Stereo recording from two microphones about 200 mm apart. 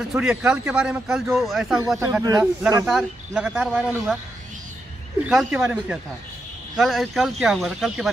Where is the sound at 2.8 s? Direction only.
Centre (ahead or behind).